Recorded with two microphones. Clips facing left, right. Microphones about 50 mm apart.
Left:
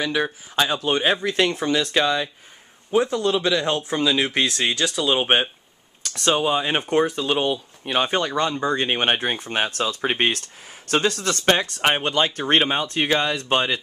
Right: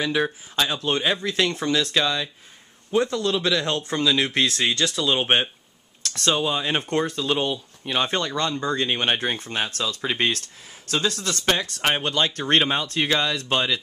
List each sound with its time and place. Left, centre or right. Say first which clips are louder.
0.0 s speech: even; centre
0.6 s speech: left 3 dB; centre
8.7 s speech: left 2 dB; left
9.5 s speech: left 3 dB; left
11.8 s speech: left 2 dB; left